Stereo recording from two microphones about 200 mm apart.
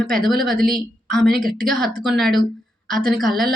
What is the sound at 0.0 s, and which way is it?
Speech, centre (ahead or behind).